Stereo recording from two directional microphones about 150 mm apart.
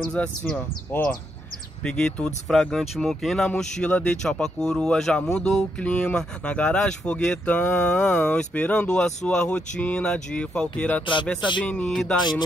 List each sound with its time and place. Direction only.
0.0 s speech: 5° left (ahead or behind)
12.2 s speech: 30° left (ahead or behind)